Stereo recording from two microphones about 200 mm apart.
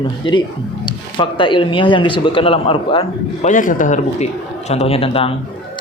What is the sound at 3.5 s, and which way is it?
Speech, 40° left (ahead or behind).